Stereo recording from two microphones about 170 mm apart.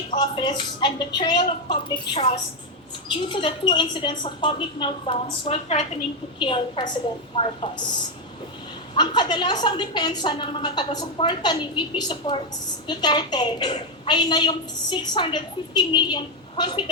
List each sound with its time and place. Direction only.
0.2 s a woman's voice: 25° left (ahead or behind)
9.0 s a woman's voice: 25° left (ahead or behind)